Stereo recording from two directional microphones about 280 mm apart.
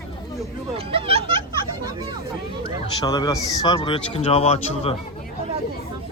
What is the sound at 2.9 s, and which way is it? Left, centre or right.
A man's voice, centre.